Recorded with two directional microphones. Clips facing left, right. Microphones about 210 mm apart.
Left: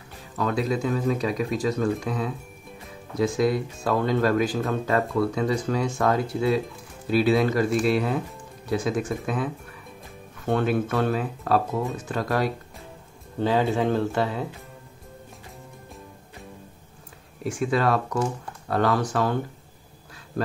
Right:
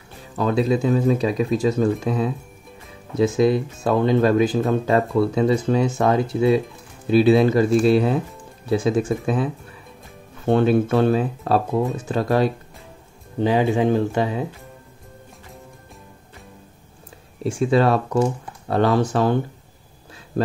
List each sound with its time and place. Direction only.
0.4 s speech: 25° right (ahead or behind)
13.4 s speech: 15° right (ahead or behind)
17.4 s speech: 25° right (ahead or behind)